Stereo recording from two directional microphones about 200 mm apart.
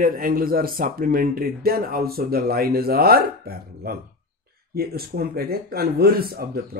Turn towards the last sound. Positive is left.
turn(degrees=-50)  # may be behind; listen again after turning